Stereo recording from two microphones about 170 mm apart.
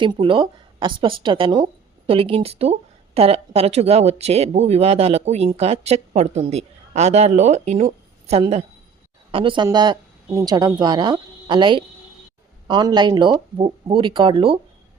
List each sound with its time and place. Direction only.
0.0 s speech: 30° right (ahead or behind)